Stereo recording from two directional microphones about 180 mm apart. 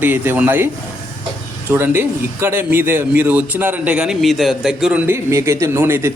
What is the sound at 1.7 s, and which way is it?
Speech, 10° right (ahead or behind).